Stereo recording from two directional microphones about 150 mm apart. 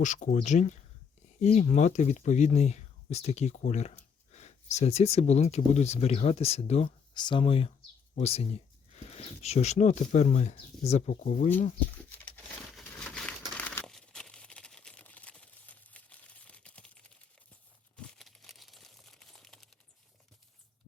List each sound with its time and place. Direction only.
0.0 s speech: 55° left (ahead or behind)
7.1 s speech: 30° left (ahead or behind); by 11.3 s 50° left (ahead or behind)
12.0 s crumpling: 10° left (ahead or behind)
13.6 s a sound: 10° left (ahead or behind)
17.9 s crumpling: 5° left (ahead or behind)